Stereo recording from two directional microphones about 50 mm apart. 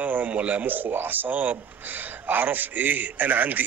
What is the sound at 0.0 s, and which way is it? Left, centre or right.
Speech, right.